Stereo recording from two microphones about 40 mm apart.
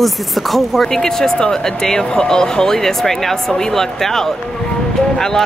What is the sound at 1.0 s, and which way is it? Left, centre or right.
Speech, centre.